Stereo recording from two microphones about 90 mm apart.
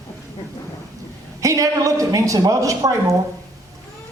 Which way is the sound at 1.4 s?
35° right (ahead or behind).